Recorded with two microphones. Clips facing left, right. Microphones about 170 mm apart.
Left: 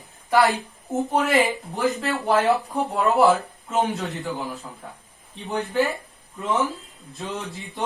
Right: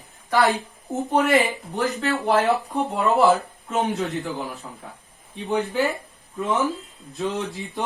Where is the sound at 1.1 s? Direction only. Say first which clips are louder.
Right 2 dB; centre (ahead or behind).